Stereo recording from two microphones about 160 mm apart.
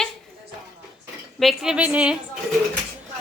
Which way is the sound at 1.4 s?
Centre (ahead or behind).